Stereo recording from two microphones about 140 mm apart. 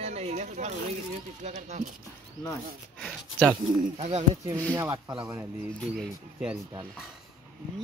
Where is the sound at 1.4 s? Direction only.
55° right (ahead or behind).